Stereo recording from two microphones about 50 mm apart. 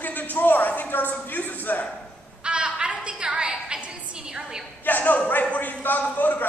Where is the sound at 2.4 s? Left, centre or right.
Right.